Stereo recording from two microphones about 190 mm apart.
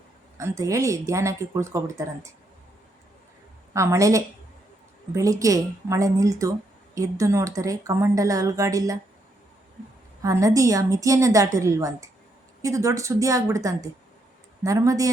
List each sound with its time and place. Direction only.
0.3 s speech: 15° right (ahead or behind)
3.7 s speech: 15° right (ahead or behind)
10.2 s speech: 15° right (ahead or behind)